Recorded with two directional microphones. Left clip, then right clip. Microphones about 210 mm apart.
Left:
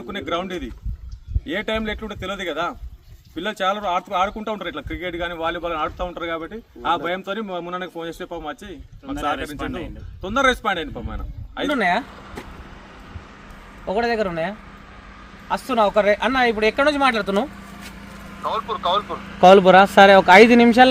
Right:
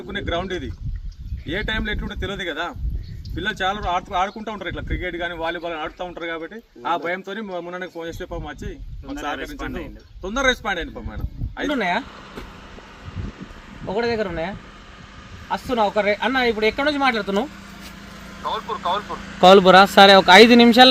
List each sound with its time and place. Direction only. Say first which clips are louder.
0.1 s speech: even; 15° left (ahead or behind)
13.8 s speech: left 2 dB; 10° left (ahead or behind)
19.4 s speech: even; 15° right (ahead or behind)